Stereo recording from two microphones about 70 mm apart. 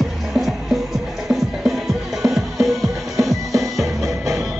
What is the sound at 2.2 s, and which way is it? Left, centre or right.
Music, centre.